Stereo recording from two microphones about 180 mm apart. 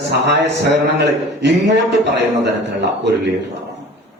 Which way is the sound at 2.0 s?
70° right (ahead or behind).